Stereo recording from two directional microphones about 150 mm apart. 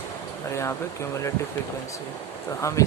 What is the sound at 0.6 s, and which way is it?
Speech, 15° left (ahead or behind).